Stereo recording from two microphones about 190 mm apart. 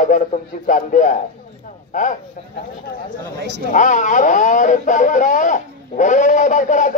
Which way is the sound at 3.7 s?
40° left (ahead or behind).